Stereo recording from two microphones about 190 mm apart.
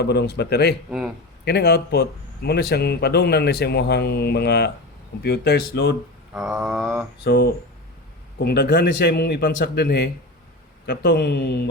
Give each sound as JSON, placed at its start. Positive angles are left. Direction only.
{"t": 0.0, "sound": "speech", "side_deg": 60}
{"t": 0.9, "sound": "mantra", "side_deg": -5}
{"t": 1.5, "sound": "speech", "side_deg": 55}
{"t": 6.3, "sound": "mantra", "side_deg": 0}
{"t": 7.3, "sound": "speech", "side_deg": 60}